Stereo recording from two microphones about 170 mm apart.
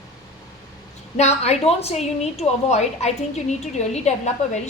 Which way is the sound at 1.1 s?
40° left (ahead or behind).